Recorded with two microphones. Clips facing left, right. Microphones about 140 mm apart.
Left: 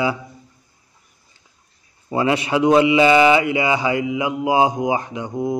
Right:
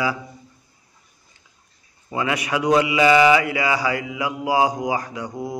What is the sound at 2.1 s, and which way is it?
Speech, 30° left (ahead or behind).